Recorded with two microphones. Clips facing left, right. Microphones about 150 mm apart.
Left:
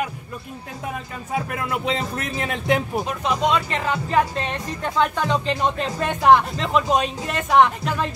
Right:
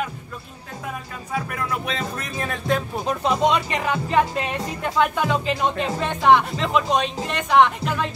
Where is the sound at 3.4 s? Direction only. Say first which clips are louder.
Even; 20° right (ahead or behind).